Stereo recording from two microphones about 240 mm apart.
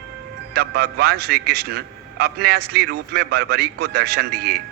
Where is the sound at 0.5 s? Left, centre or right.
Right.